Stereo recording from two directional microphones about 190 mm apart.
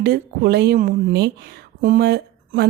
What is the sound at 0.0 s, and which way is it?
Speech, 55° right (ahead or behind).